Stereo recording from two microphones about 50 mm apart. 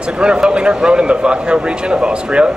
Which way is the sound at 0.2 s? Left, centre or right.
Centre.